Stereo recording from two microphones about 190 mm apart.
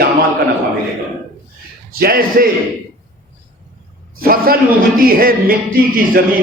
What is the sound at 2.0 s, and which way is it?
Speech, 50° right (ahead or behind).